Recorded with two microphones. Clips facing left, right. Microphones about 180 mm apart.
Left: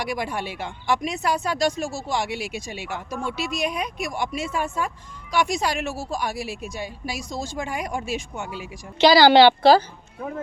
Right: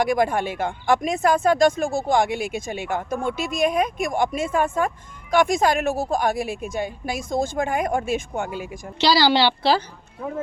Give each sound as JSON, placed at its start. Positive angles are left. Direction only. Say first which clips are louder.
{"t": 0.0, "sound": "speech", "louder": "right 7 dB", "side_deg": -50}
{"t": 9.0, "sound": "a woman's voice", "louder": "left 5 dB", "side_deg": 55}